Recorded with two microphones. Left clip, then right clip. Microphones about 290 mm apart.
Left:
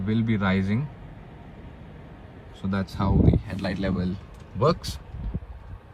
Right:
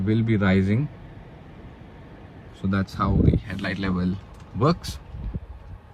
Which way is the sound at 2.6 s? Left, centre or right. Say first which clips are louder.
Right 3 dB; right.